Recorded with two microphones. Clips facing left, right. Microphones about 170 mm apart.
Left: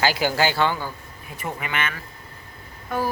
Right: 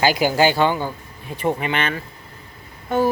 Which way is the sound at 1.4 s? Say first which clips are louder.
Right 7 dB; 30° right (ahead or behind).